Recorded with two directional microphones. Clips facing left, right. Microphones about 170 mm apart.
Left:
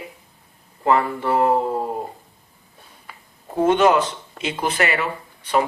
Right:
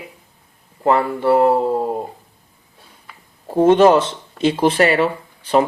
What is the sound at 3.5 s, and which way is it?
Speech, 30° right (ahead or behind).